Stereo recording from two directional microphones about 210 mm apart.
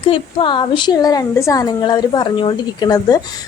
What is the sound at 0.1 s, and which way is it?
A woman's voice, 25° left (ahead or behind).